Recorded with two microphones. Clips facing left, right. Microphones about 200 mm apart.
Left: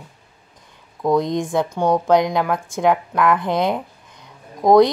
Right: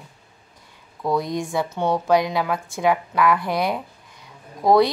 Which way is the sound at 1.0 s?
20° left (ahead or behind).